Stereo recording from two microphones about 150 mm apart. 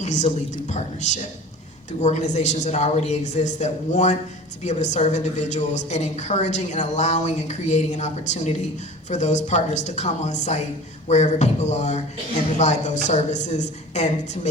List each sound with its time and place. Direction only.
0.0 s a woman's voice: 50° left (ahead or behind)